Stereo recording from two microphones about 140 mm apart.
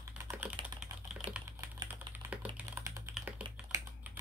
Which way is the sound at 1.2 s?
35° right (ahead or behind).